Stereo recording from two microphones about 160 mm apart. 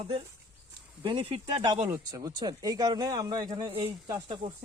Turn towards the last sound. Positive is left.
turn(degrees=-30)  # may be behind; listen again after turning